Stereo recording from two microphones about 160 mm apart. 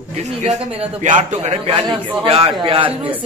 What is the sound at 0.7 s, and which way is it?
Speech, 45° right (ahead or behind).